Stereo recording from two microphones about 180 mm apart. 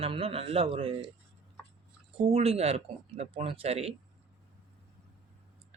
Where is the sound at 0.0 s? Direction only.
30° right (ahead or behind).